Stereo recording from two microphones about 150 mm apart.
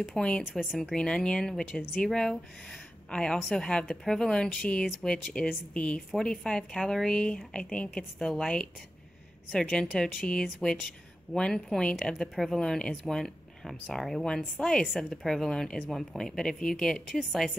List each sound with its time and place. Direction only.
0.0 s speech: 5° left (ahead or behind)